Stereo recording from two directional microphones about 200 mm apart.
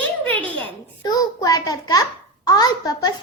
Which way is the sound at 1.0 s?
20° left (ahead or behind).